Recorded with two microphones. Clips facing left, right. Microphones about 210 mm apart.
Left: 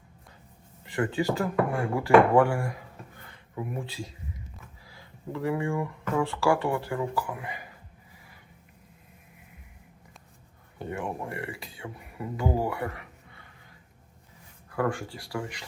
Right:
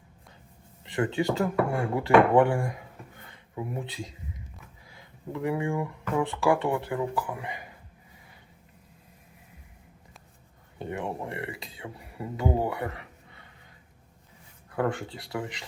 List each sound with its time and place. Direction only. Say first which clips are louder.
0.9 s speech: right 1 dB; 20° right (ahead or behind)
10.8 s speech: even; 20° right (ahead or behind)
14.7 s speech: even; 20° right (ahead or behind)